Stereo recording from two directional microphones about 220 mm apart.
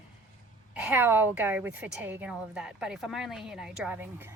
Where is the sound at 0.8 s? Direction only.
10° right (ahead or behind).